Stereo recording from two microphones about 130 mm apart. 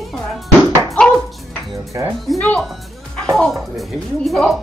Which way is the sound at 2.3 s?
5° left (ahead or behind).